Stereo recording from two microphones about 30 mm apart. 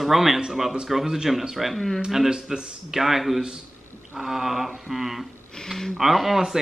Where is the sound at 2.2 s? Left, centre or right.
Right.